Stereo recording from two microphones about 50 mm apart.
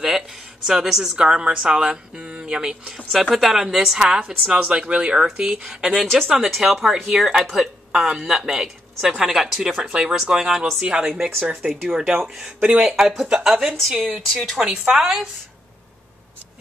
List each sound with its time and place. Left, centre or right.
0.7 s speech: centre
1.1 s speech: centre
3.1 s a woman's voice: centre
11.6 s a woman's voice: right
12.2 s a woman's voice: centre
13.7 s a woman's voice: centre
14.7 s a woman's voice: centre